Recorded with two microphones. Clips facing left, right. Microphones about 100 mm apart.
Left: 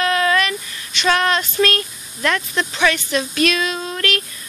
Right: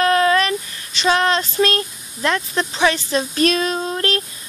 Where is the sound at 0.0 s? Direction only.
35° right (ahead or behind).